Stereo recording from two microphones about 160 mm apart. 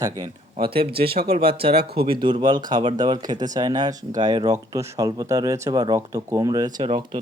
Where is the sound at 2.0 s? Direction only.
30° right (ahead or behind).